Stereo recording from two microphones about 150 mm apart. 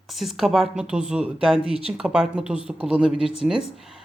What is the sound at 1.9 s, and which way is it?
Speech, 5° right (ahead or behind).